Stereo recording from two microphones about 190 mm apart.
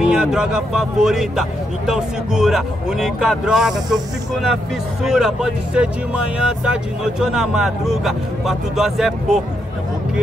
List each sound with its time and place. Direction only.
0.0 s speech: 5° right (ahead or behind)